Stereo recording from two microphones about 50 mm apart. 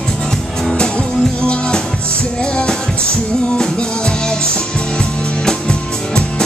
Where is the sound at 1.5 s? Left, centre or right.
Centre.